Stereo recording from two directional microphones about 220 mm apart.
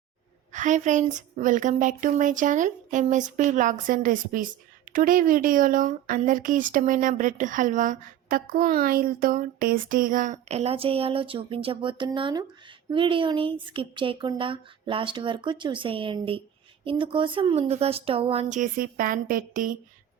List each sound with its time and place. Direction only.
0.5 s speech: 35° right (ahead or behind)